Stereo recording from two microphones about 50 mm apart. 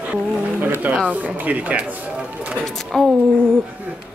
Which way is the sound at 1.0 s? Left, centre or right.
Right.